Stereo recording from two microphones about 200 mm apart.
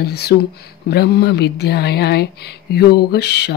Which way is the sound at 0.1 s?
55° left (ahead or behind).